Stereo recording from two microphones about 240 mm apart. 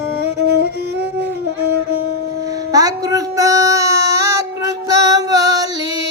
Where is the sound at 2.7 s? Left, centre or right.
Centre.